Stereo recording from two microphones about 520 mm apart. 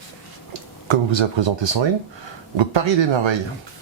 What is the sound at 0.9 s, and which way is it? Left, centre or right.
Speech, right.